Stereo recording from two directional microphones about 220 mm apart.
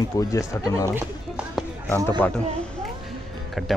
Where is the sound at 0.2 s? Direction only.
15° left (ahead or behind).